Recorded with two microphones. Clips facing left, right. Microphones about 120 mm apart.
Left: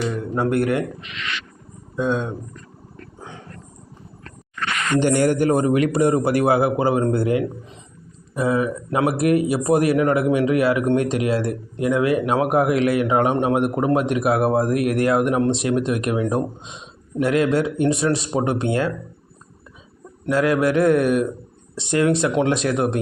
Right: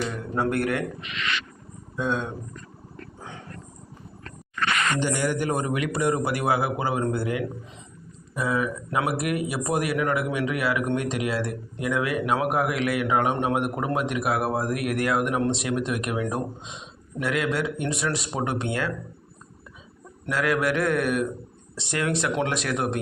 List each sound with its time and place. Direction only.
0.3 s speech: 20° left (ahead or behind)
2.0 s speech: 20° left (ahead or behind)
4.9 s speech: 60° left (ahead or behind); by 18.9 s 30° left (ahead or behind)
20.2 s speech: 25° left (ahead or behind)